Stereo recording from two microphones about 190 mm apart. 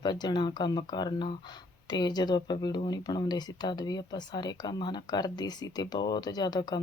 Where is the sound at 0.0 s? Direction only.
20° left (ahead or behind).